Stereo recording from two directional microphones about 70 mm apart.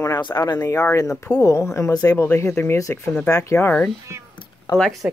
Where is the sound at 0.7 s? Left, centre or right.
Left.